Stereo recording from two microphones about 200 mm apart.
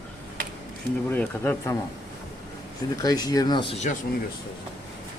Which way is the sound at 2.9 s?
20° left (ahead or behind).